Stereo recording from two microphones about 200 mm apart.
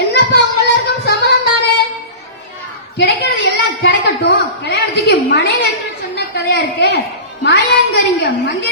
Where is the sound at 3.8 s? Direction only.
55° left (ahead or behind).